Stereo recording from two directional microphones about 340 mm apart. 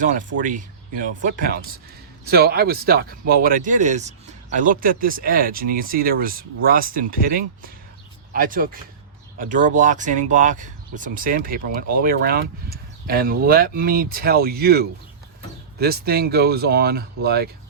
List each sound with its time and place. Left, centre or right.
0.0 s speech: right